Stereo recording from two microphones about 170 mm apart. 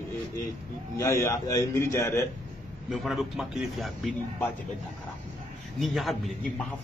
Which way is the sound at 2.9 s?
Centre (ahead or behind).